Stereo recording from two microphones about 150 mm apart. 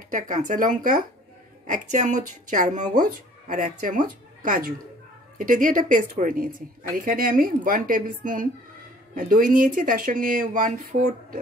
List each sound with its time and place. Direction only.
0.1 s speech: 60° right (ahead or behind)
1.7 s speech: 55° right (ahead or behind)